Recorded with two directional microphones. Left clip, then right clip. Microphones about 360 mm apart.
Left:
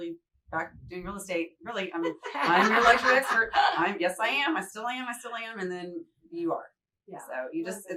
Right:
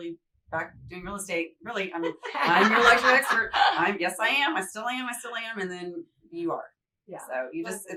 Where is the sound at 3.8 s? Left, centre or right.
Centre.